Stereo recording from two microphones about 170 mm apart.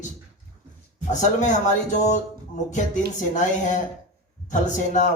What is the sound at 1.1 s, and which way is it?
A man's voice, 45° left (ahead or behind).